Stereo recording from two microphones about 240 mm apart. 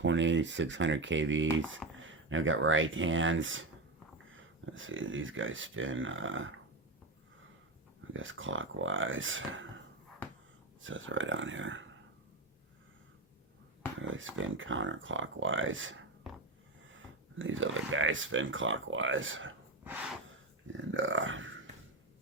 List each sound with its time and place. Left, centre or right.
0.0 s speech: right
8.1 s speech: right
10.8 s speech: right
14.0 s speech: right
19.8 s gasp: centre
20.7 s speech: right